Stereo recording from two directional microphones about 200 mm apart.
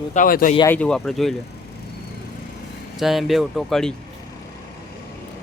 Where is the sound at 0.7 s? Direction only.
5° left (ahead or behind).